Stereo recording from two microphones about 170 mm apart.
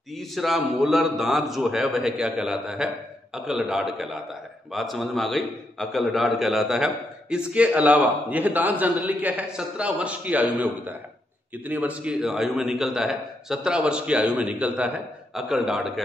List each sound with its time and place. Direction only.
0.1 s a man's voice: centre (ahead or behind)